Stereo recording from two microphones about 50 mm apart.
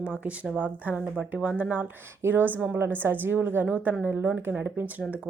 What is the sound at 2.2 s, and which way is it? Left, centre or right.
Speech, right.